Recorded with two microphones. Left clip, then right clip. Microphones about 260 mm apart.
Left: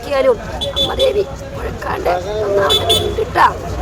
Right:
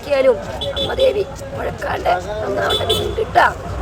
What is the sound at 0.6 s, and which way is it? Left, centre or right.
Vehicle, left.